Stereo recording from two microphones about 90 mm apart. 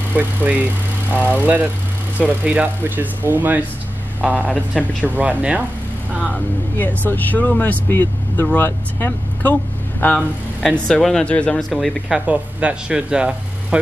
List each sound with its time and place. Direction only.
0.1 s speech: 20° right (ahead or behind)
6.8 s speech: 20° left (ahead or behind)
10.1 s speech: 5° left (ahead or behind)
12.3 s speech: 15° right (ahead or behind)